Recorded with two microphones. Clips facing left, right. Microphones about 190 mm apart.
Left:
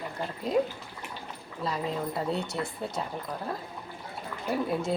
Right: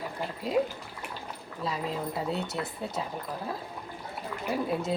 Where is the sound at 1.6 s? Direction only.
Centre (ahead or behind).